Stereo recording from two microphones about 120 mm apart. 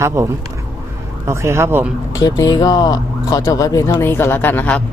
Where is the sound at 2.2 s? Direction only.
30° left (ahead or behind); by 4.8 s 15° left (ahead or behind).